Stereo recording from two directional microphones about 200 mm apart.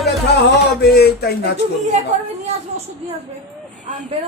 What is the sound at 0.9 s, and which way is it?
Speech, 55° left (ahead or behind).